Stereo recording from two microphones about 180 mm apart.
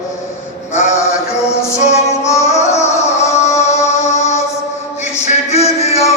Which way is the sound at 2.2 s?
15° left (ahead or behind).